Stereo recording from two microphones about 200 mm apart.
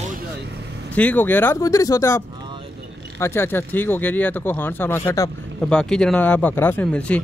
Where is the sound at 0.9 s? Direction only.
10° left (ahead or behind).